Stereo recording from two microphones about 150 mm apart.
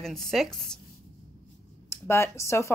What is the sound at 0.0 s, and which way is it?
Speech, 5° left (ahead or behind).